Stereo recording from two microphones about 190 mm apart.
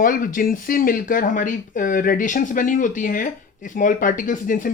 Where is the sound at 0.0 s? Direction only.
45° left (ahead or behind).